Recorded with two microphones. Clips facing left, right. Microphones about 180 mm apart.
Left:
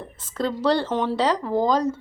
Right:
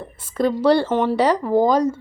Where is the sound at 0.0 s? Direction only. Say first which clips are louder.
Right 6 dB; 10° right (ahead or behind).